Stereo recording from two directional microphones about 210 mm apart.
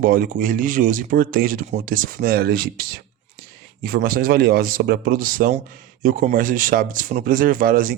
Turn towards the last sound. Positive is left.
turn(degrees=-40)  # may be behind; listen again after turning